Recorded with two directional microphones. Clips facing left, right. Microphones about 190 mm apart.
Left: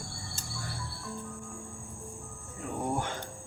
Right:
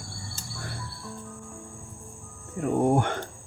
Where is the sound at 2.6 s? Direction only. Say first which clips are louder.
Right 10 dB; 60° right (ahead or behind).